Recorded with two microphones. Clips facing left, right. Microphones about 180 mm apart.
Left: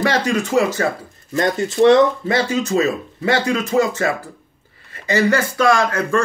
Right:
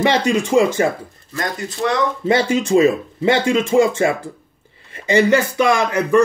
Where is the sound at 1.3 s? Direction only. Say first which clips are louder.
Left 6 dB; 30° left (ahead or behind).